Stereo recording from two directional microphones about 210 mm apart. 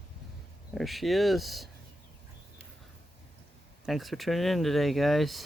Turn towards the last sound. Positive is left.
turn(degrees=0)  # may be behind; listen again after turning